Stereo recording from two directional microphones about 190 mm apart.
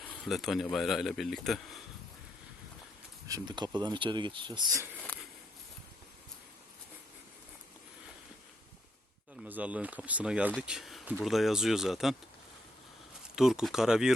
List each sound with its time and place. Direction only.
0.3 s speech: centre (ahead or behind)
3.2 s speech: 20° right (ahead or behind)
9.4 s speech: 5° right (ahead or behind)
13.3 s speech: centre (ahead or behind)